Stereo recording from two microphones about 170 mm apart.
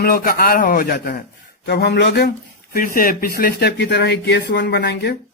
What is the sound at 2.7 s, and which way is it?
Speech, 60° left (ahead or behind).